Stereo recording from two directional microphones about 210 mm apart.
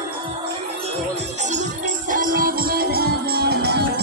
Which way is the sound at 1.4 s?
35° right (ahead or behind).